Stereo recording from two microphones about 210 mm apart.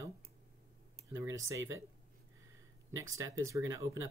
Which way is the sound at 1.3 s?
15° right (ahead or behind).